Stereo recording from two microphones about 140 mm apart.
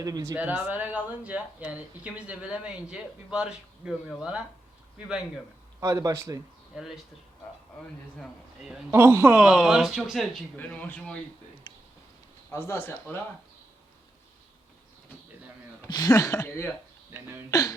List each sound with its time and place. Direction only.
0.0 s speech: 25° right (ahead or behind)
0.3 s speech: 10° right (ahead or behind)
5.8 s speech: 25° right (ahead or behind)
6.7 s speech: centre (ahead or behind)
8.2 s speech: 5° right (ahead or behind)
8.9 s speech: 20° right (ahead or behind)
9.4 s speech: centre (ahead or behind)
10.6 s speech: 10° left (ahead or behind)
12.5 s speech: 15° left (ahead or behind)
15.9 s speech: 30° left (ahead or behind)
17.1 s speech: 15° right (ahead or behind)
17.5 s speech: 25° left (ahead or behind)